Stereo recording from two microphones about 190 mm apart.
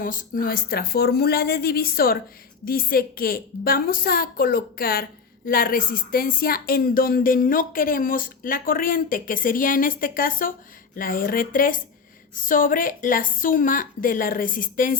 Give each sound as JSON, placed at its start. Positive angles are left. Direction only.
{"t": 0.0, "sound": "speech", "side_deg": 45}